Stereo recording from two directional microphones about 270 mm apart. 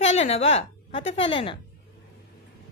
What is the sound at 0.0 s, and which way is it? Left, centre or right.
A woman's voice, left.